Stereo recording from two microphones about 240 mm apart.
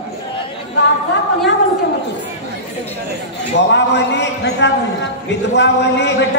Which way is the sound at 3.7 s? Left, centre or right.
Left.